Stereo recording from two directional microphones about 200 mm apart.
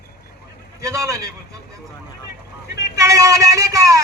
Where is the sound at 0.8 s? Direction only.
15° right (ahead or behind).